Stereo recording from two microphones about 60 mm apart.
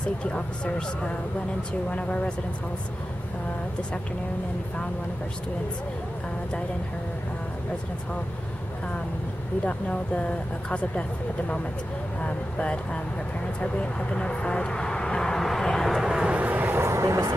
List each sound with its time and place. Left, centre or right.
0.2 s speech: centre
9.7 s speech: left; by 16.0 s centre
16.0 s speech: centre
16.3 s vehicle: right
16.9 s speech: right